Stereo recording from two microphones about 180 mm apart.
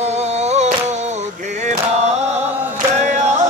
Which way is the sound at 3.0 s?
40° right (ahead or behind).